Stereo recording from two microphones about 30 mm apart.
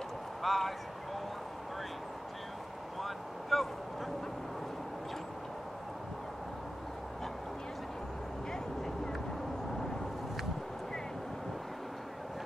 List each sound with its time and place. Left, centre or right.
0.4 s speech: centre
3.0 s vehicle: centre